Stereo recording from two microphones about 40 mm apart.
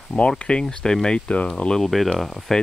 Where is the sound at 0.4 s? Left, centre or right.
Left.